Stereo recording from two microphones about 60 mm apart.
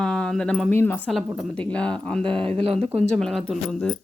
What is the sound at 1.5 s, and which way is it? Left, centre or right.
Speech, centre.